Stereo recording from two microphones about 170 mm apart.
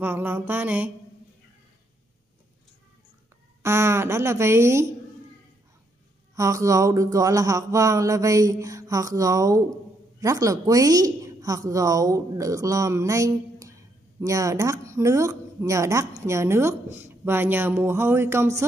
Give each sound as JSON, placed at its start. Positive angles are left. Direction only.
{"t": 0.0, "sound": "a woman's voice", "side_deg": -10}
{"t": 3.6, "sound": "a woman's voice", "side_deg": -15}
{"t": 6.3, "sound": "a sound", "side_deg": -20}
{"t": 10.2, "sound": "a woman's voice", "side_deg": -20}